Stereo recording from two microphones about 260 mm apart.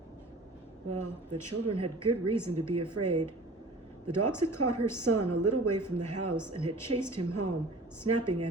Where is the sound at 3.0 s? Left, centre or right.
Right.